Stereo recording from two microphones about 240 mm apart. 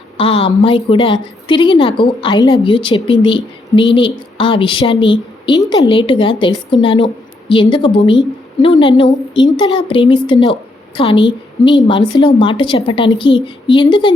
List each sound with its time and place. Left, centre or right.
0.2 s a woman's voice: left